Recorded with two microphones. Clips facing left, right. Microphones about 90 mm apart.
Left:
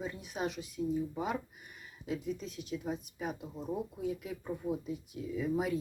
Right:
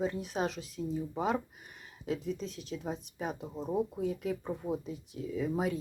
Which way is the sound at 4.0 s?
40° right (ahead or behind).